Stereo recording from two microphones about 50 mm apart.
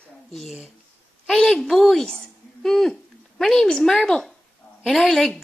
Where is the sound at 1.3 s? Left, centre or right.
Centre.